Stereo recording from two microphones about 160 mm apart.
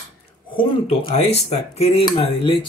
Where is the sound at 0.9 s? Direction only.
40° left (ahead or behind).